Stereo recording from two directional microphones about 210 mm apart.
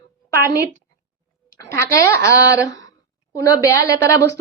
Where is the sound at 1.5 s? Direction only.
15° left (ahead or behind).